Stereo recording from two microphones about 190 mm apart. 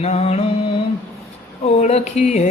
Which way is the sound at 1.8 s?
35° left (ahead or behind).